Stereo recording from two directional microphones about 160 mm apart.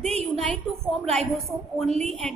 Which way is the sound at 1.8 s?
40° right (ahead or behind).